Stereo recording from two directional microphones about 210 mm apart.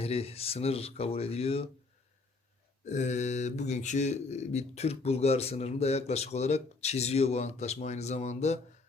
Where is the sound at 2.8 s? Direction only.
35° left (ahead or behind).